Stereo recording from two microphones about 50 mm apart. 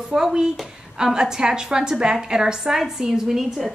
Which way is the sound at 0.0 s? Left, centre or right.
Centre.